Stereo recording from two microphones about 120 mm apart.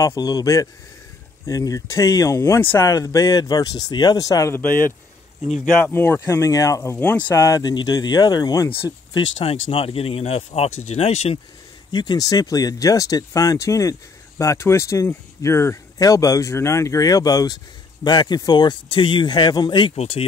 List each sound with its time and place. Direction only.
0.0 s speech: 30° left (ahead or behind)
4.6 s speech: 15° left (ahead or behind); by 8.6 s 35° left (ahead or behind)
9.1 s speech: 55° left (ahead or behind)
11.9 s speech: 35° left (ahead or behind)
20.0 s speech: 60° left (ahead or behind)